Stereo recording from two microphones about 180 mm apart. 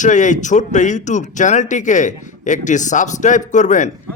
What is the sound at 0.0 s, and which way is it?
Speech, 45° left (ahead or behind).